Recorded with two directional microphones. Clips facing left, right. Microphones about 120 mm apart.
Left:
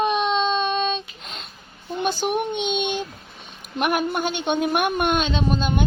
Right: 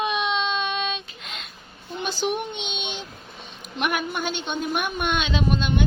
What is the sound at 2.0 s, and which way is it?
A woman's voice, 50° left (ahead or behind).